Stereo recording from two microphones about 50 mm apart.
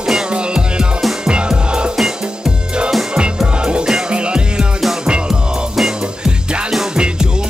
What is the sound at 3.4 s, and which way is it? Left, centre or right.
Music, centre.